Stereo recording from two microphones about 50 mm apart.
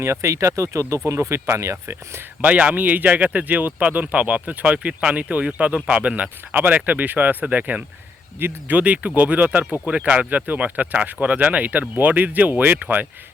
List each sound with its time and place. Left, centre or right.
0.0 s speech: right
1.0 s speech: right
2.4 s speech: right
8.4 s speech: right
8.7 s speech: right